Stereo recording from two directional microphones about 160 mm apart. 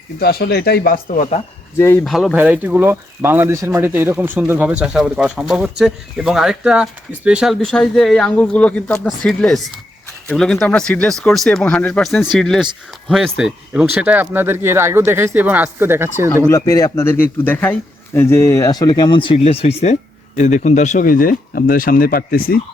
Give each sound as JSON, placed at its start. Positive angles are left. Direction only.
{"t": 0.2, "sound": "speech", "side_deg": 75}
{"t": 2.0, "sound": "speech", "side_deg": 0}
{"t": 16.5, "sound": "speech", "side_deg": 20}